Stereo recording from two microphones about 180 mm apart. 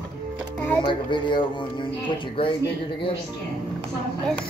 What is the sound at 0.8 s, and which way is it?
Speech, 25° left (ahead or behind).